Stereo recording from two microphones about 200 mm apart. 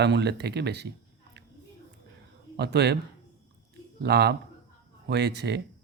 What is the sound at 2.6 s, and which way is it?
Speech, 55° right (ahead or behind).